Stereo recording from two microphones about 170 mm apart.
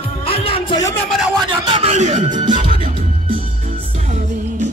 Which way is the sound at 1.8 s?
40° right (ahead or behind).